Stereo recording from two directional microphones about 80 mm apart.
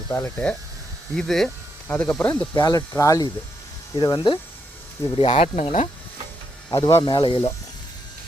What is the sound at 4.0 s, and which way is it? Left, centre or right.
Speech, left.